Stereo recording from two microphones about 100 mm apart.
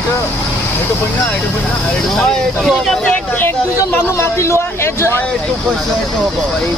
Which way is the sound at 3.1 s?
20° left (ahead or behind).